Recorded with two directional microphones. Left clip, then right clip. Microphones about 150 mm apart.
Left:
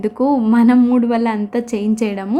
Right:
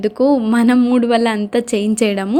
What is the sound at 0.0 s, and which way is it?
A woman's voice, 10° right (ahead or behind).